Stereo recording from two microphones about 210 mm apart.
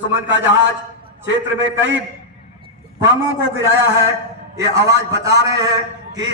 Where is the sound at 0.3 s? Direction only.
60° right (ahead or behind).